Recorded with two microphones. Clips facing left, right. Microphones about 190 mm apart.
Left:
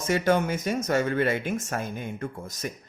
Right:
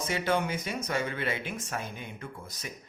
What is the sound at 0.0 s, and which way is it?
Speech, 45° left (ahead or behind).